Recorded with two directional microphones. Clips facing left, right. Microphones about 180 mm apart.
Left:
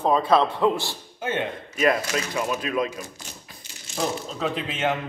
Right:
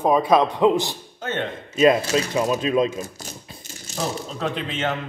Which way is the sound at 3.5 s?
25° right (ahead or behind).